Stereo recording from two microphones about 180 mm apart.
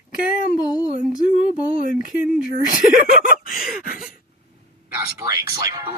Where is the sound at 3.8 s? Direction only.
50° left (ahead or behind).